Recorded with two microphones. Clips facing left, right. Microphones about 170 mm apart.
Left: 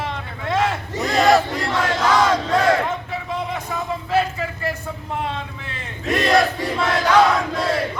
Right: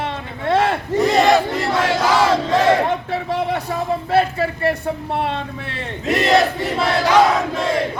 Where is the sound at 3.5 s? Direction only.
35° right (ahead or behind).